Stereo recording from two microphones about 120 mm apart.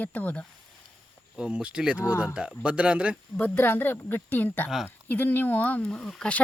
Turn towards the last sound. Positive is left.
turn(degrees=5)  # may be behind; listen again after turning